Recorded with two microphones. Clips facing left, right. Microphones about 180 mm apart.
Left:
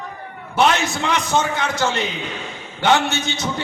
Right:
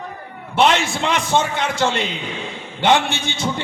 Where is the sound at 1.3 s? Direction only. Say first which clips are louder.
Right 1 dB; 25° right (ahead or behind).